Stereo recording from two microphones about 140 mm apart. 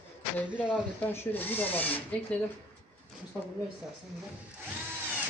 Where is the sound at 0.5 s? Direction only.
10° right (ahead or behind).